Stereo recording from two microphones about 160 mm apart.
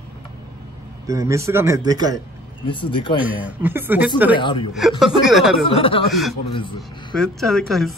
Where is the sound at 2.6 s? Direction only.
30° left (ahead or behind).